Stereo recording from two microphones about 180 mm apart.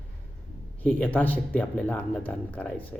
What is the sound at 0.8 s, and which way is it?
Speech, 10° left (ahead or behind).